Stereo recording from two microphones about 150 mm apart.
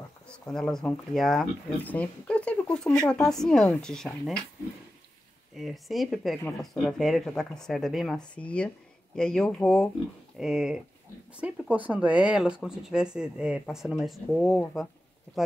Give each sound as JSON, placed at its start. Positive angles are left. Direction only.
{"t": 0.5, "sound": "speech", "side_deg": 5}
{"t": 5.6, "sound": "speech", "side_deg": 0}